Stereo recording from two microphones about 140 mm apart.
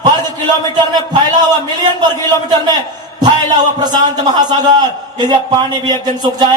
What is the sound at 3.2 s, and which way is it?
A man's voice, 30° right (ahead or behind).